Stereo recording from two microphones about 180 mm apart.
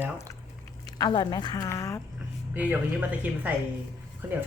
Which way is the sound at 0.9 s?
20° left (ahead or behind).